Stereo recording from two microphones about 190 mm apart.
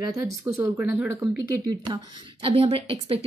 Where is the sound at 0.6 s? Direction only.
10° right (ahead or behind); by 3.3 s 30° right (ahead or behind).